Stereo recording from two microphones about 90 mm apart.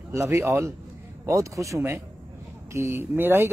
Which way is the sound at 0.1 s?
30° right (ahead or behind).